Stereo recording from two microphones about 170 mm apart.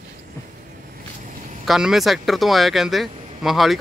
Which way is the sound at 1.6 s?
Centre (ahead or behind).